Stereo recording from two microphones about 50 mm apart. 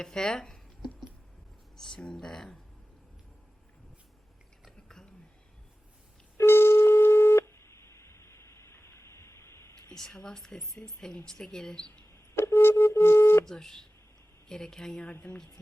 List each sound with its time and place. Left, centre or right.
0.0 s speech: centre
1.7 s a sound: centre
2.1 s speech: centre
6.3 s busy signal: left
9.9 s a woman's voice: centre
12.4 s a sound: left
13.4 s speech: centre